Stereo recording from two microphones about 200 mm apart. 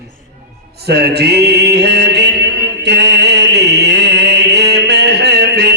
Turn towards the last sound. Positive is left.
turn(degrees=-55)  # may be behind; listen again after turning